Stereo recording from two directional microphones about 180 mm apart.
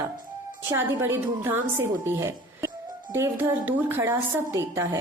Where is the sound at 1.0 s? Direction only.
15° right (ahead or behind).